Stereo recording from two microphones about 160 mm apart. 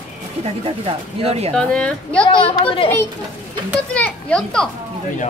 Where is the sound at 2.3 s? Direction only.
35° left (ahead or behind).